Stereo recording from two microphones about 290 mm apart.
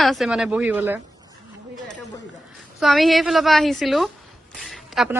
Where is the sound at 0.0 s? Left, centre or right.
Centre.